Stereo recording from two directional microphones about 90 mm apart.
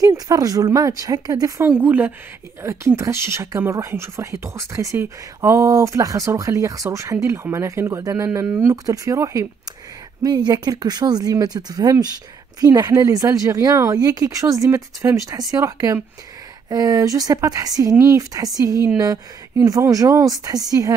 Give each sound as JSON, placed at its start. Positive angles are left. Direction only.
{"t": 0.0, "sound": "speech", "side_deg": -40}
{"t": 1.7, "sound": "speech", "side_deg": -20}
{"t": 2.6, "sound": "speech", "side_deg": -30}
{"t": 10.2, "sound": "speech", "side_deg": -45}
{"t": 17.9, "sound": "speech", "side_deg": -25}
{"t": 18.3, "sound": "speech", "side_deg": -40}